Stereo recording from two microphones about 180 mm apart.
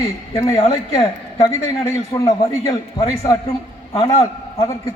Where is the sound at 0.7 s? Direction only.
25° left (ahead or behind).